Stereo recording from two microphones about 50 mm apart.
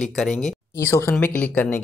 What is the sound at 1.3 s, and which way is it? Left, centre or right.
Speech, left.